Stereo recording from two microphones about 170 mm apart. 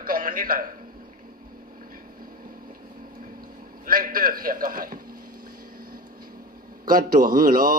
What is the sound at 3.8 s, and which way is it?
Mantra, 55° right (ahead or behind).